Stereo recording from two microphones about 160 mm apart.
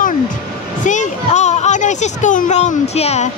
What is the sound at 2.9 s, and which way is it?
Speech, 40° left (ahead or behind).